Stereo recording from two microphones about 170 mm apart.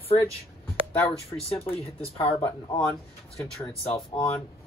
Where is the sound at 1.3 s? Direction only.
15° left (ahead or behind).